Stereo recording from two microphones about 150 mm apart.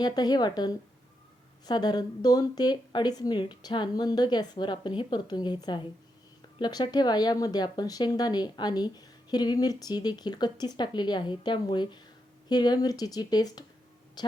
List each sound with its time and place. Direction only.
0.0 s speech: 25° left (ahead or behind)